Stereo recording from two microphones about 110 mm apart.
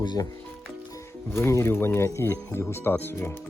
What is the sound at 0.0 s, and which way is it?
Speech, 40° left (ahead or behind).